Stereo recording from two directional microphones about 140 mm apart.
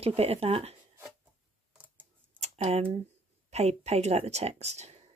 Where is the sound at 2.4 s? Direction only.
50° right (ahead or behind).